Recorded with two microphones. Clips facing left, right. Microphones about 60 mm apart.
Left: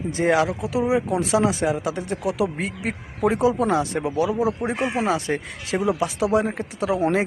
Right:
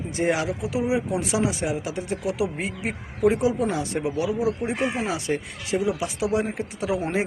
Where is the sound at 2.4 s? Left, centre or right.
Left.